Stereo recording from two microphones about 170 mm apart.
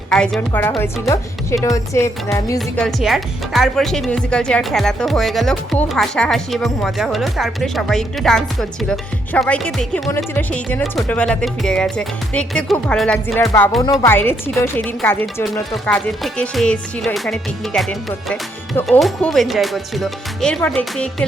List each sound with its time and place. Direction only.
0.1 s a woman's voice: 5° left (ahead or behind)
1.6 s music: 20° left (ahead or behind)
2.6 s speech: centre (ahead or behind)
13.4 s music: 20° left (ahead or behind)
14.0 s a woman's voice: 10° left (ahead or behind)
15.7 s speech: 5° left (ahead or behind)